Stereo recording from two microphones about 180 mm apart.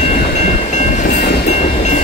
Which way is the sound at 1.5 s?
40° left (ahead or behind).